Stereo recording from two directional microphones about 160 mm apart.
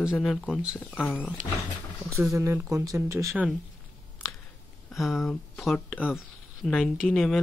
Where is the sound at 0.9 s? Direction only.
10° left (ahead or behind).